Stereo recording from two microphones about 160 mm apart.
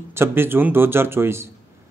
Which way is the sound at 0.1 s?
15° right (ahead or behind).